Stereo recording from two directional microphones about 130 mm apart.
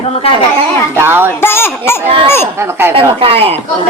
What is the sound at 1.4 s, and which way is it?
Speech, 20° left (ahead or behind).